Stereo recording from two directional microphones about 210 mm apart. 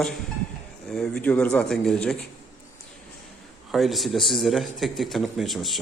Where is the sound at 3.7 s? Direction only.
Centre (ahead or behind).